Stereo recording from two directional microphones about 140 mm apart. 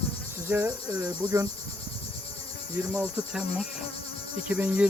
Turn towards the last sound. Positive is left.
turn(degrees=-10)  # may be behind; listen again after turning